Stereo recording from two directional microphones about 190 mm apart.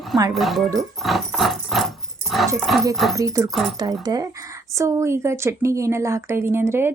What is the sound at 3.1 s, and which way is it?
Speech, 15° right (ahead or behind).